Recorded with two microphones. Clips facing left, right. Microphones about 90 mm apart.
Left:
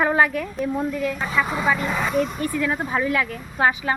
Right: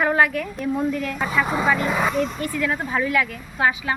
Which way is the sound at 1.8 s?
5° right (ahead or behind).